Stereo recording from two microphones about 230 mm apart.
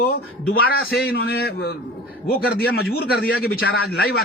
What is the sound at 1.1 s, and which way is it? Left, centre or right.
A man's voice, left.